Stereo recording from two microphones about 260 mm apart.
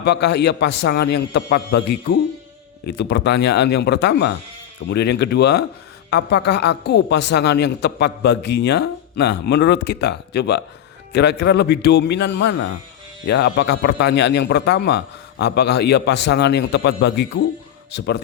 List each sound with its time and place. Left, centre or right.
0.0 s a woman's voice: left